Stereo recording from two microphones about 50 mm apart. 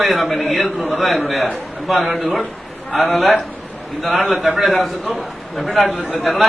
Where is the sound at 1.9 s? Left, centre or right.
Centre.